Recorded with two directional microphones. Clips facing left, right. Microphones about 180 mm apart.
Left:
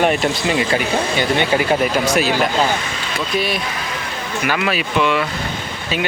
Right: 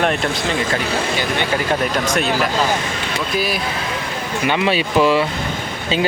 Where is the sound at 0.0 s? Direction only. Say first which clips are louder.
Left 2 dB; 5° left (ahead or behind).